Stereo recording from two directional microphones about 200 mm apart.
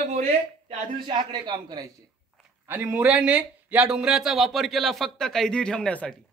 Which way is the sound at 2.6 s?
10° right (ahead or behind).